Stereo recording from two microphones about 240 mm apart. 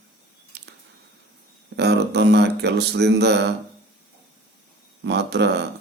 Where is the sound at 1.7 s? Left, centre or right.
Right.